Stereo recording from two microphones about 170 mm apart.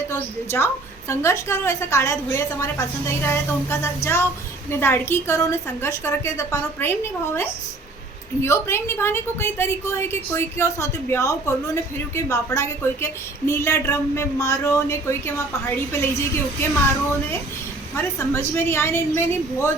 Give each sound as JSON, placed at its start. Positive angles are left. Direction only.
{"t": 0.1, "sound": "a woman's voice", "side_deg": 15}
{"t": 17.9, "sound": "a woman's voice", "side_deg": 15}